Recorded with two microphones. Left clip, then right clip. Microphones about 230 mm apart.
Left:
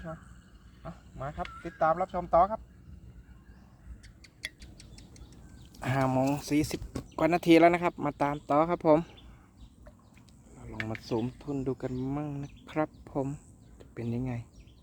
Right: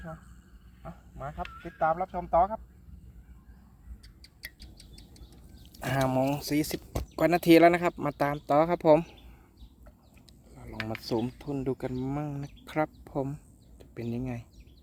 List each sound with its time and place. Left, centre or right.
0.9 s a sound: centre
1.6 s speech: centre
4.2 s rodents: centre
5.7 s speech: centre
10.5 s a sound: centre
10.8 s speech: right; by 14.4 s centre